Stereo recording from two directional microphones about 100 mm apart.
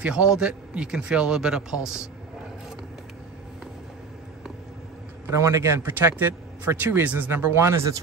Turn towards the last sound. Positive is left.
turn(degrees=-25)  # may be behind; listen again after turning